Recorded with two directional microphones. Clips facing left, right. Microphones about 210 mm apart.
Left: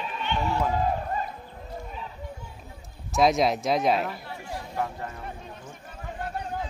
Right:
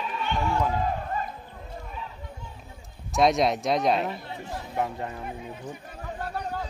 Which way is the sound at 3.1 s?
Centre (ahead or behind).